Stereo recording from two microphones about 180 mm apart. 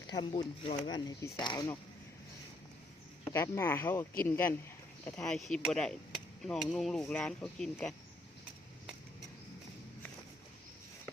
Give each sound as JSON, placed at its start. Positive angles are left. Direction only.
{"t": 0.1, "sound": "speech", "side_deg": 25}
{"t": 3.2, "sound": "speech", "side_deg": 15}